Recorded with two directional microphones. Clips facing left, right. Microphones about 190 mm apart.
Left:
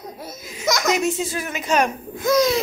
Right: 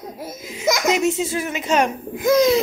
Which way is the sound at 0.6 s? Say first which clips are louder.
Right 2 dB; 15° right (ahead or behind).